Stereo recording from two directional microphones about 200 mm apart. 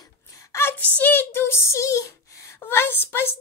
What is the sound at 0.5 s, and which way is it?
A woman's voice, 10° left (ahead or behind).